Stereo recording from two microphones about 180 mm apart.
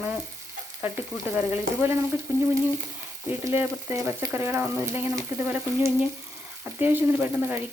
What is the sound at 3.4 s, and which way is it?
Frying, 15° right (ahead or behind).